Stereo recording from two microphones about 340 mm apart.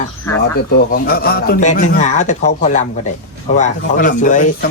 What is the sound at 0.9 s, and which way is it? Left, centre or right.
Speech, left.